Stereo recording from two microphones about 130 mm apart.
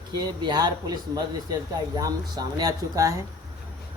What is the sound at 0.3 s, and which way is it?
A man's voice, 30° right (ahead or behind).